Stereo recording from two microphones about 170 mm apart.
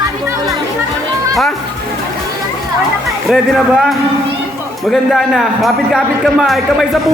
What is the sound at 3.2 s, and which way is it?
A man's voice, centre (ahead or behind).